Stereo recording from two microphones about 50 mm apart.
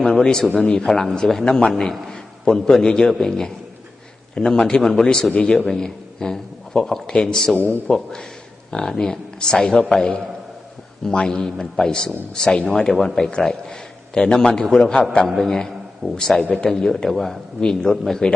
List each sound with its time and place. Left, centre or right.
0.0 s a man's voice: centre
0.9 s a man's voice: centre
5.3 s a man's voice: left
5.6 s a man's voice: centre